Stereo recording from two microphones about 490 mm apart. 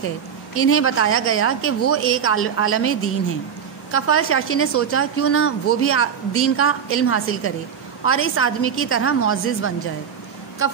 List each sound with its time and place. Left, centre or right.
0.6 s a woman's voice: left